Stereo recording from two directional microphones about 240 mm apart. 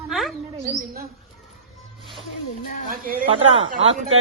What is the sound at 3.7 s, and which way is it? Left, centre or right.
Speech, right.